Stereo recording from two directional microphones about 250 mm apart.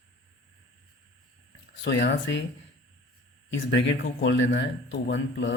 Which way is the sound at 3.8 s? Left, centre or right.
Left.